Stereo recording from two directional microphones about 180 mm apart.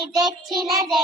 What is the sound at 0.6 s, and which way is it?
Child singing, centre (ahead or behind).